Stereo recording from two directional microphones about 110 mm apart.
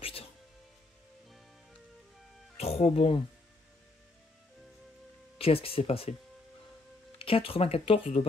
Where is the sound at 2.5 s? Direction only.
70° left (ahead or behind).